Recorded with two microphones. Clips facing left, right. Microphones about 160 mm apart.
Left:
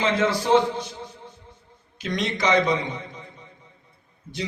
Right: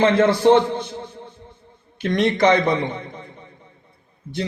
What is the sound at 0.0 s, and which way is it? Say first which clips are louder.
A man's voice: right 8 dB; 55° right (ahead or behind).